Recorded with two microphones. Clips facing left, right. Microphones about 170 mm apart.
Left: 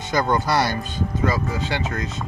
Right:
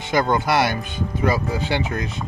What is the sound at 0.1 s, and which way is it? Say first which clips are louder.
Speech: right 1 dB; 20° right (ahead or behind).